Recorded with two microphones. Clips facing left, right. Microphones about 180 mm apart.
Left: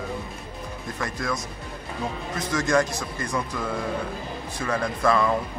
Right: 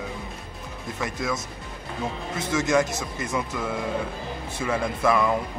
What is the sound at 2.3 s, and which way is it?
Speech, 25° right (ahead or behind).